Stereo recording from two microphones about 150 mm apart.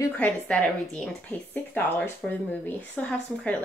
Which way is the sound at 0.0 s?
10° left (ahead or behind).